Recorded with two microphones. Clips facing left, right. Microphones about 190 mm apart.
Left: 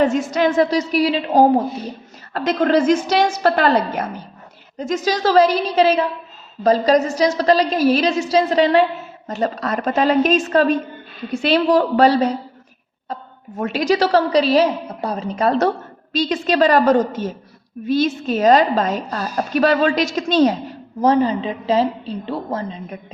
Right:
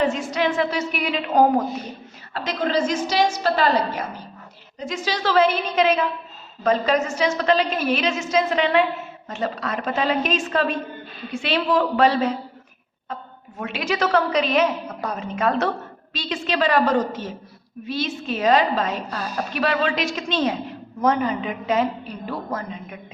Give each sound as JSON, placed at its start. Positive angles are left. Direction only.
{"t": 0.0, "sound": "a woman's voice", "side_deg": 45}
{"t": 2.3, "sound": "a woman's voice", "side_deg": 50}
{"t": 4.8, "sound": "a woman's voice", "side_deg": 45}
{"t": 13.6, "sound": "a woman's voice", "side_deg": 40}